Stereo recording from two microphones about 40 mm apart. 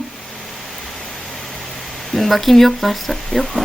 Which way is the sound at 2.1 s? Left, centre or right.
Centre.